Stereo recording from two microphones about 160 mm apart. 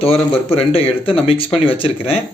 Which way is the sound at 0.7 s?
35° left (ahead or behind).